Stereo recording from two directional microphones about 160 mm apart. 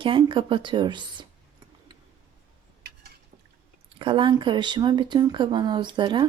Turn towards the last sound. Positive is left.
turn(degrees=-30)  # may be behind; listen again after turning